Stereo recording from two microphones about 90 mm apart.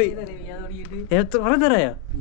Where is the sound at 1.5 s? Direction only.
30° left (ahead or behind).